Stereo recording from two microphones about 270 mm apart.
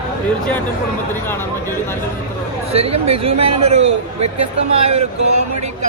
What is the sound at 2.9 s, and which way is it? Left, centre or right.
Speech, right.